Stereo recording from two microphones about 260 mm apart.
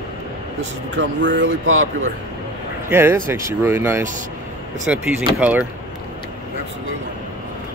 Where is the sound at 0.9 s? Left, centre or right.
Right.